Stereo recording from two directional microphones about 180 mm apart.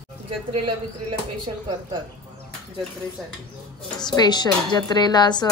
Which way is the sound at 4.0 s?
25° left (ahead or behind).